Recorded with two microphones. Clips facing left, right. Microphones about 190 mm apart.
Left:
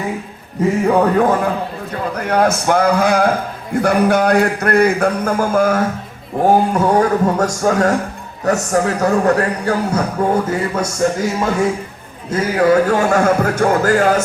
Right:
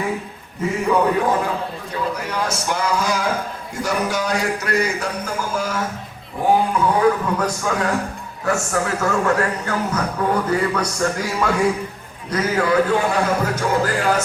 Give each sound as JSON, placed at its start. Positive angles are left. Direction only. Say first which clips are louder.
{"t": 0.9, "sound": "a man's voice", "louder": "left 3 dB", "side_deg": 50}
{"t": 12.6, "sound": "a man's voice", "louder": "left 7 dB", "side_deg": 45}